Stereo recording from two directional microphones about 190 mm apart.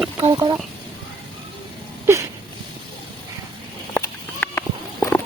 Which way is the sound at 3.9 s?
10° left (ahead or behind).